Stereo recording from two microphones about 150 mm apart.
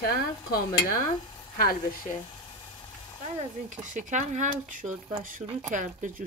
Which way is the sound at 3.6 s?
55° right (ahead or behind).